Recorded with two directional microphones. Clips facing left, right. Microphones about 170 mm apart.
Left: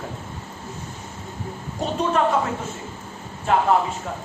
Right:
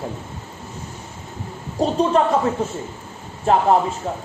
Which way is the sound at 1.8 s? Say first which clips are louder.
Right 4 dB; 35° right (ahead or behind).